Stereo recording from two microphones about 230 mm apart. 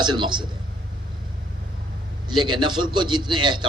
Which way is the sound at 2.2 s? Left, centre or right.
Centre.